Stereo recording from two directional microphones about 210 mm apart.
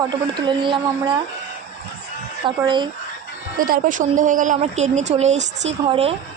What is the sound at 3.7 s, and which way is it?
Speech, 40° right (ahead or behind).